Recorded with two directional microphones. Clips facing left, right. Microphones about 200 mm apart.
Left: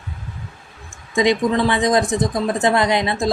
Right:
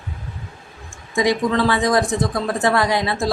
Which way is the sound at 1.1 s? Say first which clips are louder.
Left 2 dB; 20° left (ahead or behind).